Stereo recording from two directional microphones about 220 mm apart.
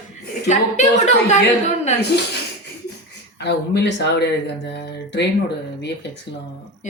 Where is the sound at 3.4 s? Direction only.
50° left (ahead or behind).